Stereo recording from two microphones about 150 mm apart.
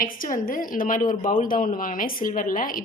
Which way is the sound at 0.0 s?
70° left (ahead or behind).